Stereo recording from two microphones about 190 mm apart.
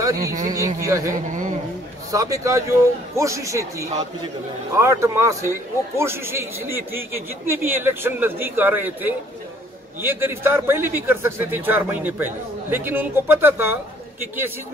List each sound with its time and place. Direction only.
0.0 s a man's voice: 15° right (ahead or behind)